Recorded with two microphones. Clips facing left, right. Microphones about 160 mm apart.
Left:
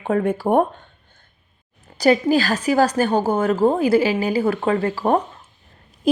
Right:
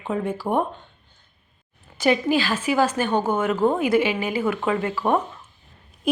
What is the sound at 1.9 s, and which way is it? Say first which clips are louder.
A woman's voice: left 4 dB; 40° left (ahead or behind).